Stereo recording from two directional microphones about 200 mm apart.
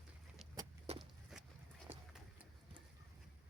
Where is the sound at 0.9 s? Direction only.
30° right (ahead or behind).